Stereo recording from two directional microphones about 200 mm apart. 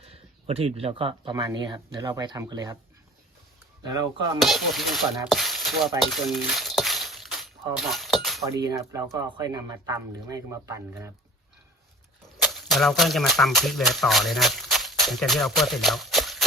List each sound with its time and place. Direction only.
0.0 s speech: 30° right (ahead or behind)
4.4 s speech: centre (ahead or behind)
6.0 s a sound: centre (ahead or behind)
8.6 s speech: 15° right (ahead or behind)
12.4 s speech: centre (ahead or behind)